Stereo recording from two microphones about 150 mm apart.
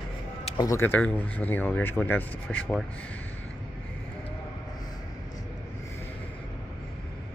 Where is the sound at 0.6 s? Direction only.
20° left (ahead or behind).